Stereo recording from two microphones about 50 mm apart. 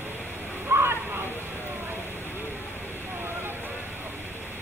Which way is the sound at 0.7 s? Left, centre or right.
Right.